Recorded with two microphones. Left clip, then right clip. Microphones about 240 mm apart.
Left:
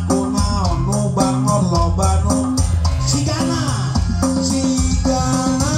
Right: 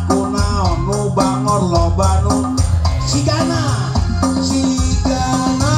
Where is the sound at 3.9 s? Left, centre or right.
Left.